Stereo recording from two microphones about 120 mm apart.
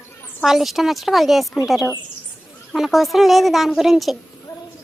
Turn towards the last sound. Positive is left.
turn(degrees=0)  # may be behind; listen again after turning